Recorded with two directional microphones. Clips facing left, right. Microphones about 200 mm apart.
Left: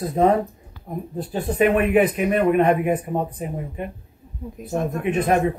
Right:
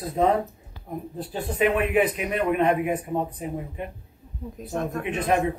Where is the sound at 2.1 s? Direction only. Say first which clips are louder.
Left 6 dB; 50° left (ahead or behind).